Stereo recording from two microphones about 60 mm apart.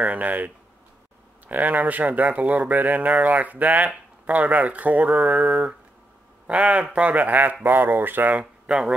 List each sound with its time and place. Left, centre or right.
0.0 s speech: right
1.5 s speech: right
5.2 s a sound: centre
6.9 s speech: right
8.3 s speech: centre